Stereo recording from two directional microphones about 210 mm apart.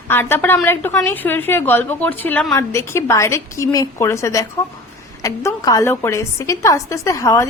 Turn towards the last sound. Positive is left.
turn(degrees=15)  # may be behind; listen again after turning